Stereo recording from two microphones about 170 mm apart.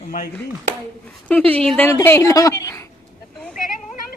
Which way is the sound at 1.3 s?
10° left (ahead or behind).